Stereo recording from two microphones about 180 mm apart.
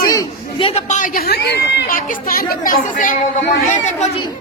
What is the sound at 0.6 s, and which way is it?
A woman's voice, 40° left (ahead or behind).